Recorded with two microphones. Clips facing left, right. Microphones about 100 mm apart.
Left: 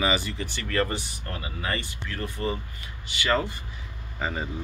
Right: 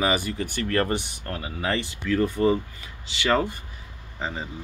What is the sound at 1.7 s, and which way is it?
Speech, 90° right.